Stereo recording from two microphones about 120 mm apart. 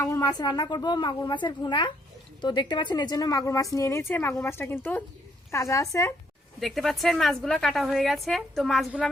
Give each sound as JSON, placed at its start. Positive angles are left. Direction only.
{"t": 0.0, "sound": "a woman's voice", "side_deg": 25}
{"t": 6.6, "sound": "a woman's voice", "side_deg": 0}